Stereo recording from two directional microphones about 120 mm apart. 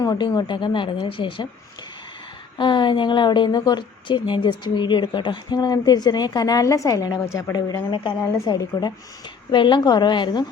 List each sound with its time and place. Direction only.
0.0 s a woman's voice: 35° left (ahead or behind)
2.6 s a woman's voice: 40° left (ahead or behind)